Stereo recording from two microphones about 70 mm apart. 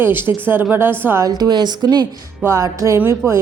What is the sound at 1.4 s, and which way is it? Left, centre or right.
Speech, right.